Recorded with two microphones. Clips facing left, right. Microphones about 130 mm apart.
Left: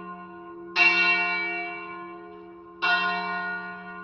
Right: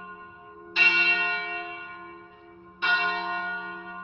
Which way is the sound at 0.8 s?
35° left (ahead or behind).